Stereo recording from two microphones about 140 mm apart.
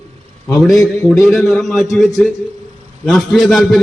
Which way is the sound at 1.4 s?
Centre (ahead or behind).